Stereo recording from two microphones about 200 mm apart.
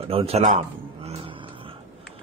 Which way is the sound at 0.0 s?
30° right (ahead or behind).